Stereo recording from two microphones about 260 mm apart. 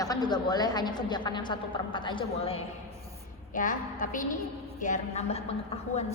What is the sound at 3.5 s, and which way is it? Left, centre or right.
A woman's voice, left.